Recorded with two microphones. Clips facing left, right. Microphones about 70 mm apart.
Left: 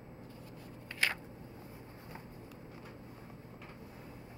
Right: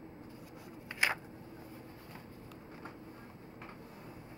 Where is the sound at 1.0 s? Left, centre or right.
Centre.